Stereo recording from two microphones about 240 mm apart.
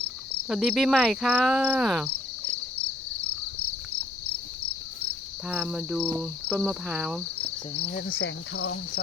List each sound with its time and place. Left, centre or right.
0.4 s speech: centre
5.5 s speech: centre
7.7 s cricket: left
8.2 s cricket: left